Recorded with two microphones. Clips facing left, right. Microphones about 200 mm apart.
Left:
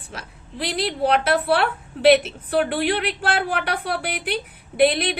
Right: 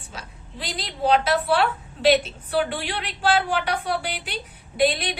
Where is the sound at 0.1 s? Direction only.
60° left (ahead or behind).